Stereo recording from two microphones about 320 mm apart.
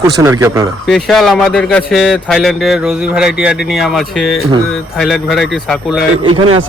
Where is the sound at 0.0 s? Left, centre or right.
Centre.